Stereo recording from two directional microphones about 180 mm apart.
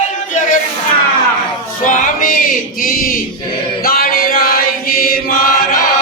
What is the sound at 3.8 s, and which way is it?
Chant, 55° left (ahead or behind).